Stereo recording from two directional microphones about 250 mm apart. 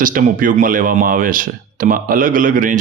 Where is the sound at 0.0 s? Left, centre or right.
Right.